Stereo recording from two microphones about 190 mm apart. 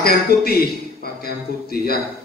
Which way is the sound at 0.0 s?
55° left (ahead or behind).